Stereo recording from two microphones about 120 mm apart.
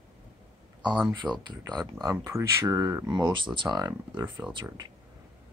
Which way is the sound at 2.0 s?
25° right (ahead or behind).